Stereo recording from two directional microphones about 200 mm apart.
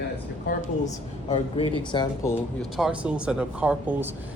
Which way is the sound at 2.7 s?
5° right (ahead or behind).